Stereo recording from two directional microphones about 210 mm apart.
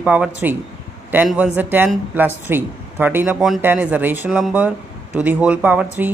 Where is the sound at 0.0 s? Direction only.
5° right (ahead or behind).